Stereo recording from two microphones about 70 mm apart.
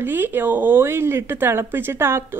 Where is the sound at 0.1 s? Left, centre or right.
Right.